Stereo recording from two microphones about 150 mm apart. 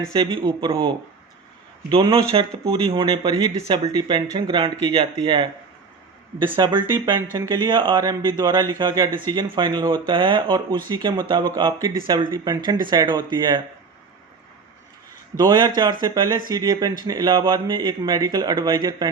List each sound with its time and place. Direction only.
0.1 s a man's voice: 30° right (ahead or behind)
1.9 s speech: 35° right (ahead or behind)
6.6 s a man's voice: 30° right (ahead or behind)
15.4 s a man's voice: 25° right (ahead or behind)